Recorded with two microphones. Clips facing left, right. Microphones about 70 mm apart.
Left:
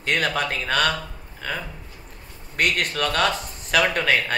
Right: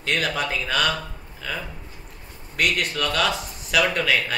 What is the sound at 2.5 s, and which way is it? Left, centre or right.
A man's voice, left.